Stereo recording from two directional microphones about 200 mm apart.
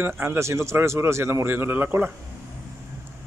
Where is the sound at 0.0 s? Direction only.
10° right (ahead or behind).